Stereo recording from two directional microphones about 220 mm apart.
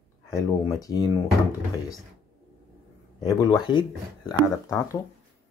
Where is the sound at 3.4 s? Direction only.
20° left (ahead or behind).